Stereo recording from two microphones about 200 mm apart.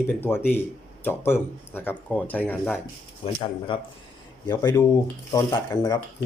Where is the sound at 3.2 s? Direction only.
25° left (ahead or behind).